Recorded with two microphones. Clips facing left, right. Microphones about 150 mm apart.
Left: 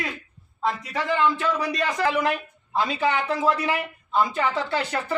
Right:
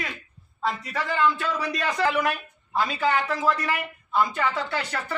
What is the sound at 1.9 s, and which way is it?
Speech, 10° left (ahead or behind).